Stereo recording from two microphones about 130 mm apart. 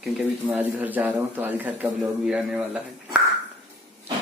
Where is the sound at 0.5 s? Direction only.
10° right (ahead or behind).